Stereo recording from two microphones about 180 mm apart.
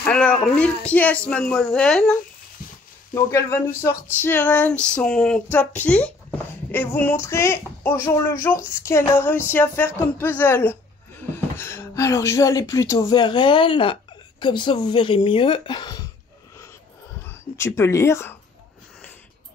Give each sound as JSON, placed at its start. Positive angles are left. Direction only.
{"t": 0.0, "sound": "speech", "side_deg": 5}
{"t": 3.2, "sound": "speech", "side_deg": 15}
{"t": 17.6, "sound": "speech", "side_deg": 15}